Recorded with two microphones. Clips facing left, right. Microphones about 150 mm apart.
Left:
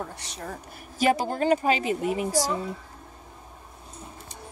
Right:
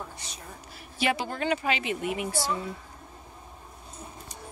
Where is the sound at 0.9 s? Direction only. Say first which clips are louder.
Left 5 dB; 40° left (ahead or behind).